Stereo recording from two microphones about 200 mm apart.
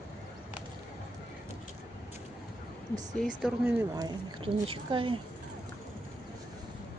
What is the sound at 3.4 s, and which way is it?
Speech, 10° right (ahead or behind).